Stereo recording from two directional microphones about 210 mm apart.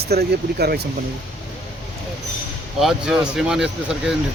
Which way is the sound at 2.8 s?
Centre (ahead or behind).